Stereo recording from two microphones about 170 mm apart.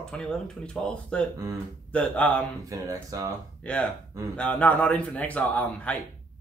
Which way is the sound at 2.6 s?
20° right (ahead or behind).